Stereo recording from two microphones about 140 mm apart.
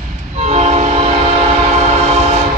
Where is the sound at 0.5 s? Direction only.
50° right (ahead or behind).